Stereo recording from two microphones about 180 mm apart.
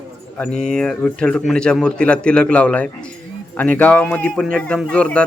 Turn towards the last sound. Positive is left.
turn(degrees=5)  # may be behind; listen again after turning